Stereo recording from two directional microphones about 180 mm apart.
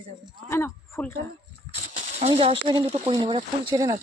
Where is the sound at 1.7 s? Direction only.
35° right (ahead or behind).